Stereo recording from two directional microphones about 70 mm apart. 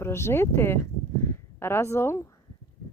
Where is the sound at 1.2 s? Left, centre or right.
Left.